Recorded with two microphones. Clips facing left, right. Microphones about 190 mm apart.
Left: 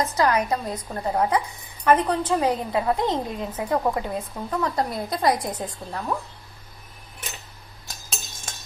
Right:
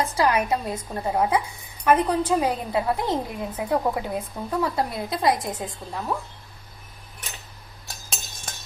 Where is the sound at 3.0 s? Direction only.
20° left (ahead or behind).